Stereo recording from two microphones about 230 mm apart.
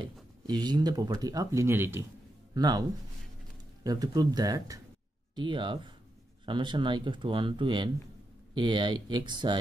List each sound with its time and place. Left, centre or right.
0.0 s speech: centre
3.8 s speech: centre